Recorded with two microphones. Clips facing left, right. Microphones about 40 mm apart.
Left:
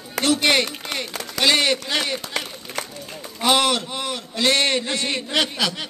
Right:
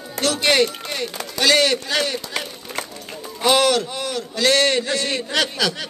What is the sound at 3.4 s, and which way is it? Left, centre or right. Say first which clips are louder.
A man's voice: right 2 dB; centre.